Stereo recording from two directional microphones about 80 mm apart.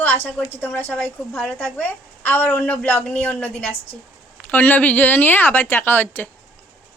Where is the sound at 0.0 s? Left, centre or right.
Left.